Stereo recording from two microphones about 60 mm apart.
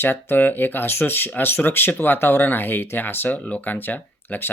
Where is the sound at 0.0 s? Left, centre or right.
Left.